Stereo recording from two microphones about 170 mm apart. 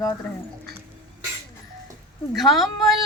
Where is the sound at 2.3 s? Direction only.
Centre (ahead or behind).